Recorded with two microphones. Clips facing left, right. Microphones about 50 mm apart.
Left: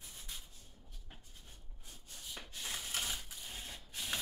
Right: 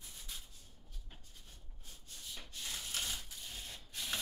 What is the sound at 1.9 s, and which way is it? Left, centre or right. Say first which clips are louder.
Rub: left 1 dB; centre.